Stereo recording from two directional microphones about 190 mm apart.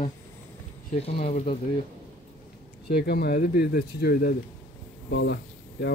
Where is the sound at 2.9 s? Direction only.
55° left (ahead or behind).